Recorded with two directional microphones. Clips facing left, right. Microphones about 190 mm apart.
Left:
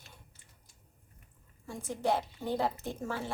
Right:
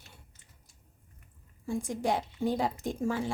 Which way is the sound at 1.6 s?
15° right (ahead or behind).